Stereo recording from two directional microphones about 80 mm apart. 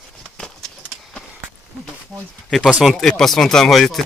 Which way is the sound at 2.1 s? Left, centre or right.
Centre.